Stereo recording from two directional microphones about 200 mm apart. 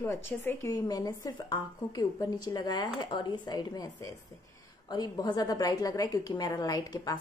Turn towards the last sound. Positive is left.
turn(degrees=20)  # may be behind; listen again after turning